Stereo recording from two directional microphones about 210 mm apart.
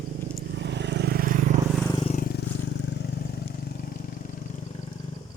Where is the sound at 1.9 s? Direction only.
30° left (ahead or behind).